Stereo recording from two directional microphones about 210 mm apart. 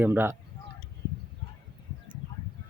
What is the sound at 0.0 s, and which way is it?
Speech, 10° right (ahead or behind).